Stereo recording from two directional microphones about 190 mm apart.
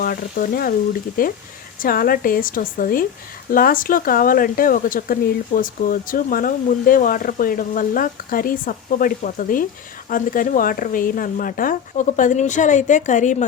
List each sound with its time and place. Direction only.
0.0 s speech: 50° left (ahead or behind)